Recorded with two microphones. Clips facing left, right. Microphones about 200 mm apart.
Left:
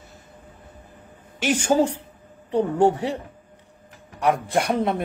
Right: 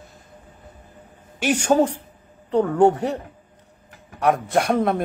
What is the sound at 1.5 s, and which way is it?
A woman's voice, 60° right (ahead or behind).